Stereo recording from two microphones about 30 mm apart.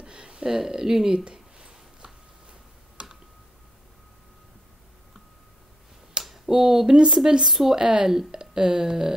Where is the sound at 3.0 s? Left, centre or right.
Right.